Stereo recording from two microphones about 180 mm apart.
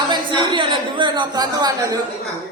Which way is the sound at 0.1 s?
25° right (ahead or behind).